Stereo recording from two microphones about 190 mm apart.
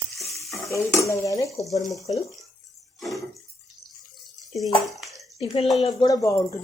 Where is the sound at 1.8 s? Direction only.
Centre (ahead or behind).